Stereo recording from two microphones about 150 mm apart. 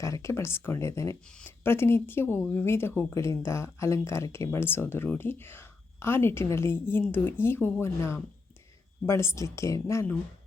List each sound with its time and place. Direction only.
0.0 s speech: 20° left (ahead or behind)